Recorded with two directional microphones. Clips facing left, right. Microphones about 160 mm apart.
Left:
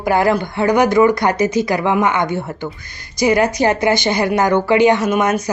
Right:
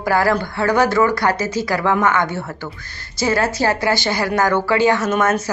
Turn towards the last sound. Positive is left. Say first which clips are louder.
# left 2 dB
turn(degrees=15)  # may be behind; listen again after turning